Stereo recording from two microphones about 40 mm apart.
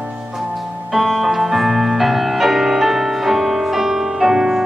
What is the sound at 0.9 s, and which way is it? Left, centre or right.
Music, centre.